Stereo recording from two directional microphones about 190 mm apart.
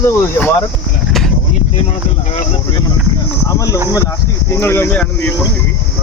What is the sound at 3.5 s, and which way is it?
Speech, 15° left (ahead or behind).